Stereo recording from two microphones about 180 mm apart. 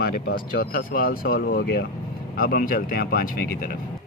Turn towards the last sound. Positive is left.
turn(degrees=55)  # may be behind; listen again after turning